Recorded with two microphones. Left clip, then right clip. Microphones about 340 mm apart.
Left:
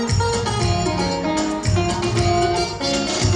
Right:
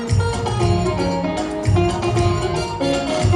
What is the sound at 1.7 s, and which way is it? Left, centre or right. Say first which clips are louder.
Music: right 4 dB; centre.